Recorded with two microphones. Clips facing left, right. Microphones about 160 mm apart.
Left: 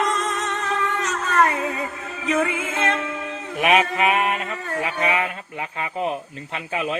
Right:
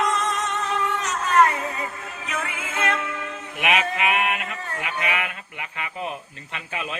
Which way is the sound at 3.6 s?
40° left (ahead or behind).